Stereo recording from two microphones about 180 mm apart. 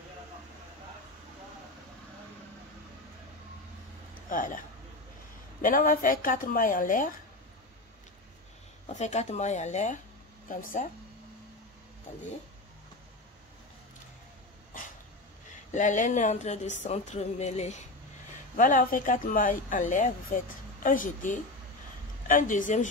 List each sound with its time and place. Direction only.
4.3 s a man's voice: 45° left (ahead or behind)
5.6 s speech: 50° left (ahead or behind)
8.8 s speech: 40° left (ahead or behind)
14.7 s dog: 50° left (ahead or behind)
15.7 s speech: 45° left (ahead or behind)